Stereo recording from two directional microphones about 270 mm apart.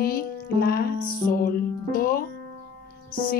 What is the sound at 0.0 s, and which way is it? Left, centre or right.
Music, left.